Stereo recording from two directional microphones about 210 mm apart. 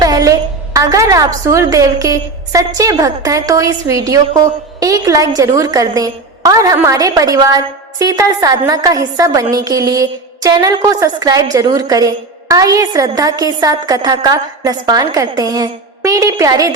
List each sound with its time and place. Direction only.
0.0 s a woman's voice: 15° right (ahead or behind)